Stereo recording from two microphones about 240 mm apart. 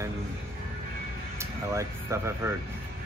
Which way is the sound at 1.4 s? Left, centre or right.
Centre.